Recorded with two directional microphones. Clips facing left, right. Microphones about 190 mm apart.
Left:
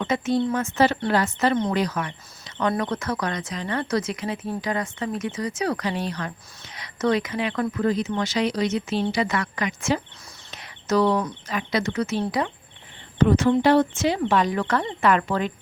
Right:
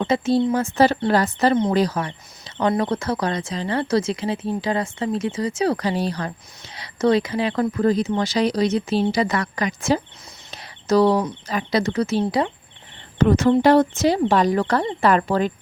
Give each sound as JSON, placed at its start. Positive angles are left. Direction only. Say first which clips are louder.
{"t": 0.0, "sound": "speech", "louder": "right 4 dB", "side_deg": -30}
{"t": 10.5, "sound": "a sound", "louder": "right 4 dB", "side_deg": -35}
{"t": 11.4, "sound": "speech", "louder": "right 4 dB", "side_deg": -35}
{"t": 13.1, "sound": "speech", "louder": "right 2 dB", "side_deg": -45}